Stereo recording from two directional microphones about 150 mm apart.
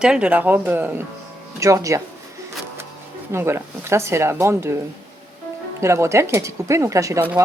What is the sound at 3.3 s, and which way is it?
Speech, 15° right (ahead or behind).